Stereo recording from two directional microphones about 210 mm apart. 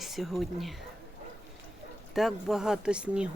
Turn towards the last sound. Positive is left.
turn(degrees=-5)  # may be behind; listen again after turning